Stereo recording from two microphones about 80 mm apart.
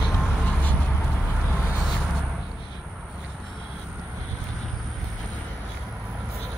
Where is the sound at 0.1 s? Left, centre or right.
Left.